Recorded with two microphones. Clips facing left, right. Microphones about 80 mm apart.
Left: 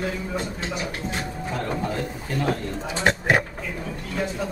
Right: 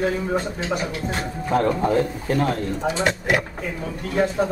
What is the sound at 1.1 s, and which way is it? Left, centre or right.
Speech, right.